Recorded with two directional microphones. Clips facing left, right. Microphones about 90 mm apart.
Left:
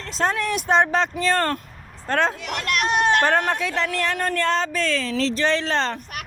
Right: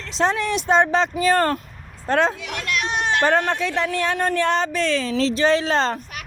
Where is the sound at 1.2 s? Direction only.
15° right (ahead or behind).